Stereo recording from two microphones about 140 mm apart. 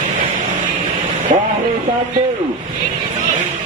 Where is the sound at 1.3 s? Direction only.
65° right (ahead or behind).